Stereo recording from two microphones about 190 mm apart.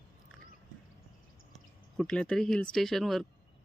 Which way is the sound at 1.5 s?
5° left (ahead or behind).